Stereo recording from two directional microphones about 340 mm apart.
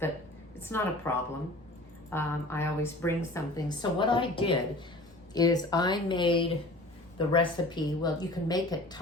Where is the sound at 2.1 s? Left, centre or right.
Centre.